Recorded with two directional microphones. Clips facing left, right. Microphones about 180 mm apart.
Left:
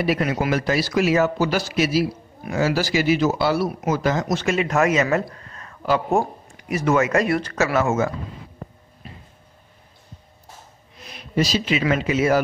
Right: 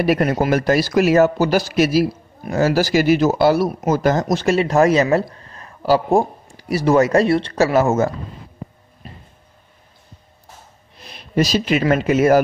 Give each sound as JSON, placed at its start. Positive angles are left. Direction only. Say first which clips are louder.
{"t": 0.0, "sound": "a man's voice", "louder": "right 5 dB", "side_deg": -50}
{"t": 11.0, "sound": "a sound", "louder": "even", "side_deg": -30}
{"t": 11.3, "sound": "speech", "louder": "right 4 dB", "side_deg": -50}